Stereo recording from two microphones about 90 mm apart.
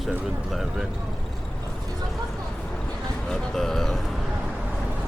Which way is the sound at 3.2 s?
5° left (ahead or behind).